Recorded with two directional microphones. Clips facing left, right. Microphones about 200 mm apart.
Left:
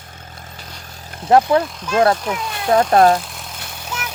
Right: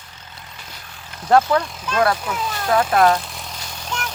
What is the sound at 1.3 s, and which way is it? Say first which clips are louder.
Speech: left 2 dB; 25° left (ahead or behind).